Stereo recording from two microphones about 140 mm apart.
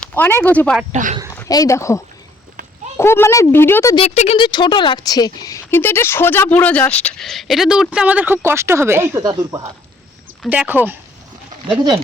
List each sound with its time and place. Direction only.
0.0 s speech: 15° left (ahead or behind)
1.5 s speech: 25° left (ahead or behind)
3.0 s speech: 20° left (ahead or behind)
3.9 s speech: 50° left (ahead or behind)
4.4 s speech: 30° left (ahead or behind); by 9.2 s 15° right (ahead or behind)
9.2 s speech: 30° right (ahead or behind)
10.5 s speech: 10° right (ahead or behind)